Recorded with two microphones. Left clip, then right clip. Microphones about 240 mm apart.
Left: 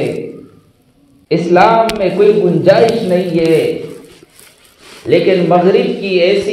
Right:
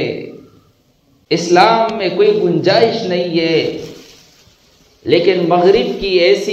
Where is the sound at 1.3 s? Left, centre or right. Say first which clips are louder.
Left 2 dB; right.